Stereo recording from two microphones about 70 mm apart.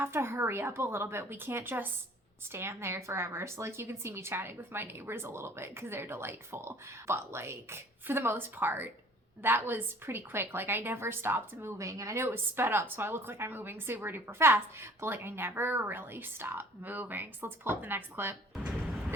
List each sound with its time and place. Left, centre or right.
0.0 s a woman's voice: right
11.8 s speech: right
12.2 s a woman's voice: right
18.6 s a sound: centre